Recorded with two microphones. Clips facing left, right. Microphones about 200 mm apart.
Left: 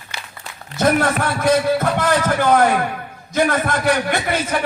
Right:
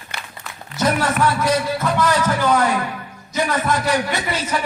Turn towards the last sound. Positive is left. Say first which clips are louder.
# left 3 dB
turn(degrees=55)  # may be behind; listen again after turning